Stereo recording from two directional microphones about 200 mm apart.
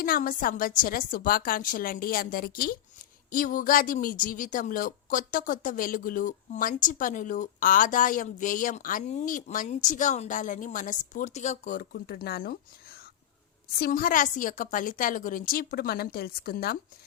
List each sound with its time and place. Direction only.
0.0 s a woman's voice: 45° left (ahead or behind)
13.7 s a woman's voice: 50° left (ahead or behind)